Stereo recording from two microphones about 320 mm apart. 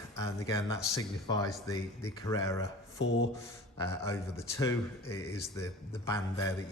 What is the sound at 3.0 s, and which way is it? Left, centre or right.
Rub, left.